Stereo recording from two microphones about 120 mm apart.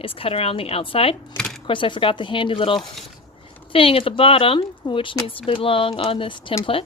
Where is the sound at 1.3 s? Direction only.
5° left (ahead or behind).